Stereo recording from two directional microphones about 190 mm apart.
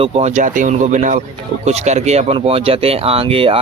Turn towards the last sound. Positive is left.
turn(degrees=-30)  # may be behind; listen again after turning